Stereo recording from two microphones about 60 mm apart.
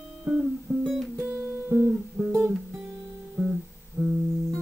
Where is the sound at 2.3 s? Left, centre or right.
Centre.